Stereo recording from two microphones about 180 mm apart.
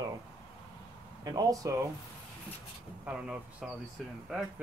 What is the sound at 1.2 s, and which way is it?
Speech, 20° right (ahead or behind).